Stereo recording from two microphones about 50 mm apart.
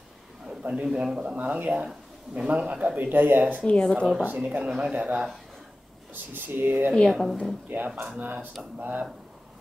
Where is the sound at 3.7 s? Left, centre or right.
Centre.